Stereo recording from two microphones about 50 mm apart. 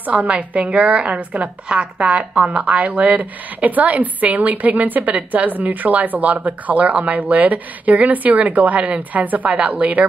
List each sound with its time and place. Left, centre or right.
0.0 s a woman's voice: right